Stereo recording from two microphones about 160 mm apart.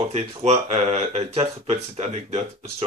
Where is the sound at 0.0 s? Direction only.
45° right (ahead or behind).